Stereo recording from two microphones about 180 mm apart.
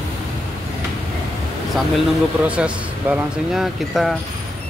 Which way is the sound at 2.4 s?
5° right (ahead or behind).